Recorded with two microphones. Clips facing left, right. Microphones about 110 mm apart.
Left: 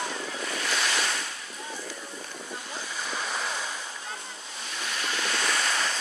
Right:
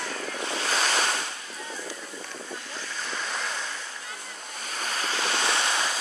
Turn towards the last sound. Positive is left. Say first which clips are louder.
# right 2 dB
turn(degrees=-20)  # may be behind; listen again after turning